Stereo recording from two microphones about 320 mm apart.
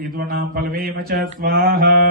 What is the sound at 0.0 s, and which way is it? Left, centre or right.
Mantra, right.